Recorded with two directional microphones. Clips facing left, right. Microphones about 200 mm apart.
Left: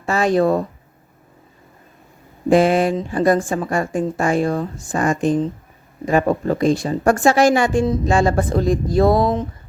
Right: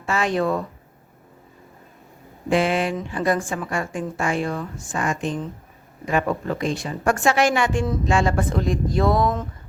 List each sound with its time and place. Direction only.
0.0 s speech: 40° left (ahead or behind)
2.5 s speech: 40° left (ahead or behind)